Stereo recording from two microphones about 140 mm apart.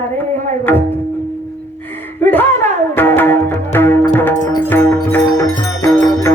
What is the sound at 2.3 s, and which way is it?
Music, 15° left (ahead or behind).